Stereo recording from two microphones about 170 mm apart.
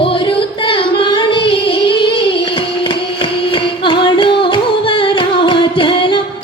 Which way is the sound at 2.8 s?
30° left (ahead or behind).